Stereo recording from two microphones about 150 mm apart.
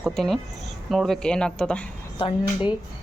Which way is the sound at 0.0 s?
Centre (ahead or behind).